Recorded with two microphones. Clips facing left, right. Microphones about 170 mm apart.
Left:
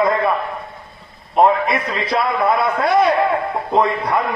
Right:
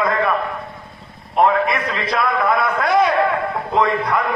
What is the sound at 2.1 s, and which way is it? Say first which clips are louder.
A man's voice: left 1 dB; 30° left (ahead or behind).